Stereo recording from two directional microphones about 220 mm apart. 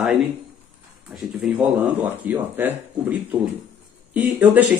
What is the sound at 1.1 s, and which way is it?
Speech, centre (ahead or behind).